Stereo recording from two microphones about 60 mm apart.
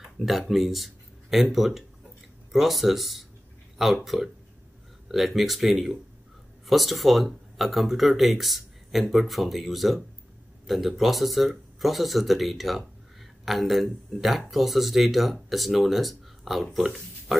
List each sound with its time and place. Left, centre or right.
0.2 s speech: centre